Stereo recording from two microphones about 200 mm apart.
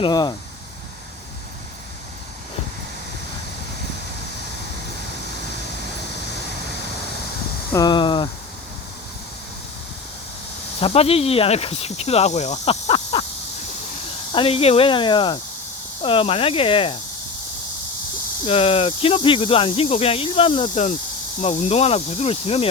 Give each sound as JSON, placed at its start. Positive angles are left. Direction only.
{"t": 0.0, "sound": "speech", "side_deg": 20}
{"t": 7.7, "sound": "a sound", "side_deg": 20}
{"t": 10.8, "sound": "speech", "side_deg": 30}
{"t": 14.3, "sound": "speech", "side_deg": 30}
{"t": 18.4, "sound": "speech", "side_deg": 30}